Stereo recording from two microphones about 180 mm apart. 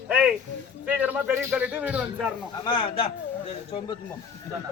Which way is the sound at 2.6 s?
30° left (ahead or behind).